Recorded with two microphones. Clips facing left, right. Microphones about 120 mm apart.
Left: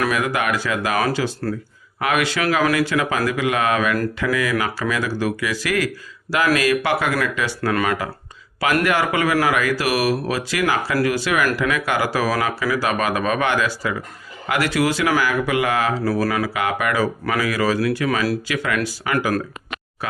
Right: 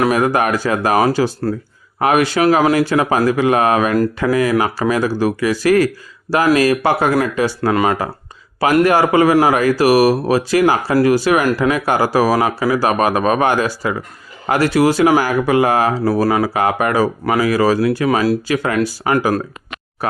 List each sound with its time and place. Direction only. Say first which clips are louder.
0.0 s speech: right 6 dB; 35° right (ahead or behind)